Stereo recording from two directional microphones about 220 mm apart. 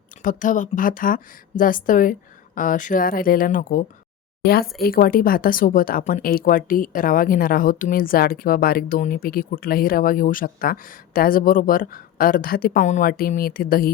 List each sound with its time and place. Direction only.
0.2 s a woman's voice: 35° left (ahead or behind)